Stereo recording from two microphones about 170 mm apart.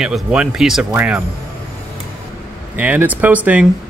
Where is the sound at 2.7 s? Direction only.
10° right (ahead or behind).